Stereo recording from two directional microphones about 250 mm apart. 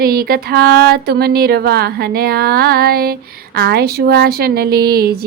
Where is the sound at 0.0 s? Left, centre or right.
Right.